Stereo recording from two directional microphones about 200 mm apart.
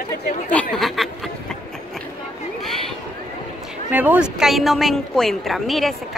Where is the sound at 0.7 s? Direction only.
Centre (ahead or behind).